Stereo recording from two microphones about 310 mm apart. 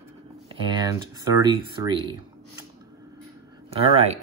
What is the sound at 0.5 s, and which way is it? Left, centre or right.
Speech, centre.